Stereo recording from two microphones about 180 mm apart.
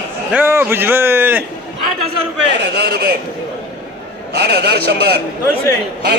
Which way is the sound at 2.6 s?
65° right (ahead or behind).